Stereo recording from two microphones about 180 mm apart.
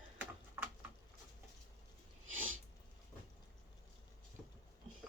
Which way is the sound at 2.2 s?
90° right.